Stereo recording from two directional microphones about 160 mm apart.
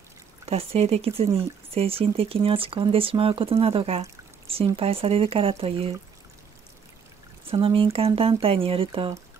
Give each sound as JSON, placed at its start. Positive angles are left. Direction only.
{"t": 0.5, "sound": "speech", "side_deg": -40}
{"t": 7.6, "sound": "speech", "side_deg": -35}